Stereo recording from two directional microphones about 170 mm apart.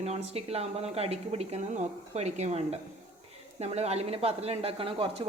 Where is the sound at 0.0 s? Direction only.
40° right (ahead or behind).